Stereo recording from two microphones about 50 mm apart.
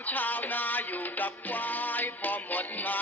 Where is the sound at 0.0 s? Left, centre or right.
Left.